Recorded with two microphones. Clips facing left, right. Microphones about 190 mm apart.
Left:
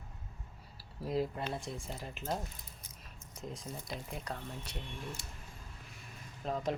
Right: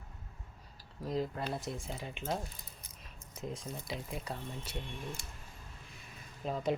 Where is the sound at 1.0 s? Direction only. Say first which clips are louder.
Left 1 dB; 5° left (ahead or behind).